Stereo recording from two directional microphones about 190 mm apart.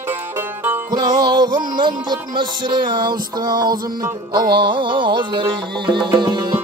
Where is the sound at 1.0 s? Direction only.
20° right (ahead or behind).